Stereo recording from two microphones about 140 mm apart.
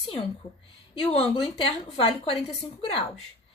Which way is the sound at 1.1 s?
45° left (ahead or behind).